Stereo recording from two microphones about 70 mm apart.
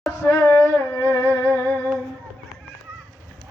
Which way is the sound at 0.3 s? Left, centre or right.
Left.